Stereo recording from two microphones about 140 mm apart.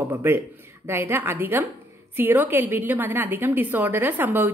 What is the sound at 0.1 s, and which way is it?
A woman's voice, 15° right (ahead or behind).